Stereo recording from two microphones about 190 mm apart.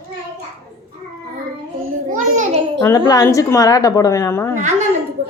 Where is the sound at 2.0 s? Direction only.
40° right (ahead or behind).